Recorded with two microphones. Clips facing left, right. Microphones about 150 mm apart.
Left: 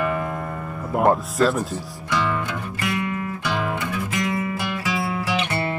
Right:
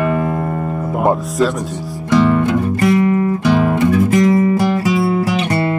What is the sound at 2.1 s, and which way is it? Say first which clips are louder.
Music: right 12 dB; 40° right (ahead or behind).